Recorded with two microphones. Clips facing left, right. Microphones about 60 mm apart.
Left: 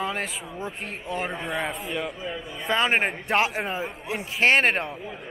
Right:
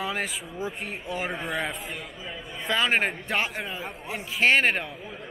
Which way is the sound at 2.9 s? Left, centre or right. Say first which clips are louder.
Left 2 dB; centre.